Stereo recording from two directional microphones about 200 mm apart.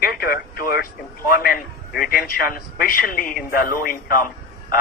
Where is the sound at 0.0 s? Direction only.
50° left (ahead or behind).